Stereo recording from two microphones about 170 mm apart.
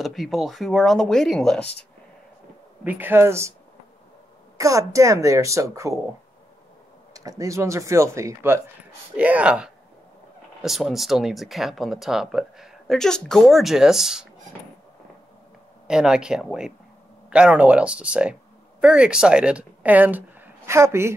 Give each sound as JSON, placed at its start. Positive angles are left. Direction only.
{"t": 0.0, "sound": "speech", "side_deg": 0}
{"t": 2.8, "sound": "speech", "side_deg": -10}
{"t": 4.6, "sound": "speech", "side_deg": -20}
{"t": 7.2, "sound": "speech", "side_deg": -20}
{"t": 15.9, "sound": "speech", "side_deg": -5}